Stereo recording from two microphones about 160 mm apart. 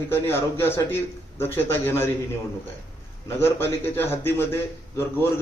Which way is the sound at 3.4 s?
15° left (ahead or behind).